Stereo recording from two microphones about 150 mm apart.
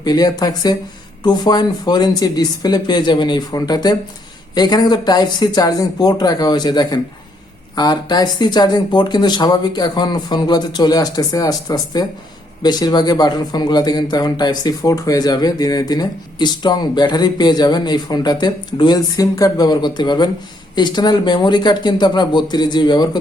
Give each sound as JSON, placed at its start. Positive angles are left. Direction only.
{"t": 0.0, "sound": "a man's voice", "side_deg": 25}